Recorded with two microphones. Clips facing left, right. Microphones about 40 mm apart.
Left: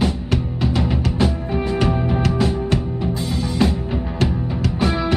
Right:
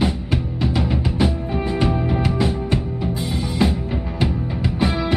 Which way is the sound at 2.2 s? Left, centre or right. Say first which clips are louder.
Left 1 dB; centre.